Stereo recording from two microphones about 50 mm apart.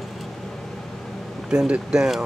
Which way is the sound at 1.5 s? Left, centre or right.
Centre.